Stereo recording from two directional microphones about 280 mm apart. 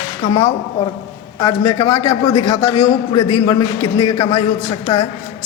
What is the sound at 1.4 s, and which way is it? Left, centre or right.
A man's voice, centre.